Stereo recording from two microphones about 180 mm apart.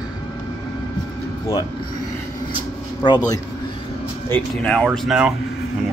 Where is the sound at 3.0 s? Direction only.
20° left (ahead or behind).